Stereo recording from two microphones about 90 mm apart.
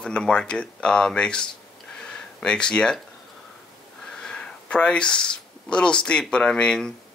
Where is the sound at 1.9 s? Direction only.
10° left (ahead or behind).